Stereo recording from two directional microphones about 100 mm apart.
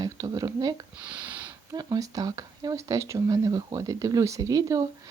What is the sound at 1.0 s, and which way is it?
Sniff, 15° right (ahead or behind).